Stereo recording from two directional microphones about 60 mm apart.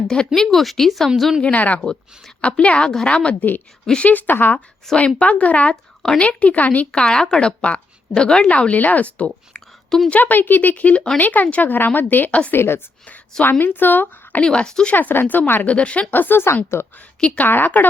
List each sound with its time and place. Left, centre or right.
0.1 s speech: centre
0.4 s speech: centre
1.4 s speech: left
4.1 s a woman's voice: left
4.9 s speech: left
6.9 s a woman's voice: centre; by 12.4 s left
12.5 s a woman's voice: left
14.4 s speech: centre
14.9 s a woman's voice: left
15.7 s speech: centre
16.7 s a woman's voice: left
17.2 s speech: centre
17.4 s a woman's voice: left